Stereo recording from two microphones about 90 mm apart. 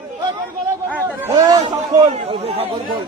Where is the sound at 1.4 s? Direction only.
45° right (ahead or behind).